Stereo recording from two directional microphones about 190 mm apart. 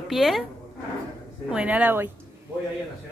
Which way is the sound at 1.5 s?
5° right (ahead or behind).